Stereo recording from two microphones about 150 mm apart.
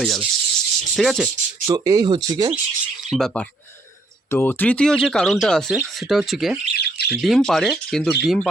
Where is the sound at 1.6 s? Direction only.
25° right (ahead or behind).